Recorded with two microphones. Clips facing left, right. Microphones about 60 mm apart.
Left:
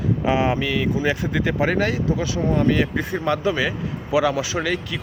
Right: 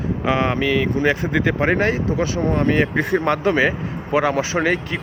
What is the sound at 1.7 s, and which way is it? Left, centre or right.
Speech, right.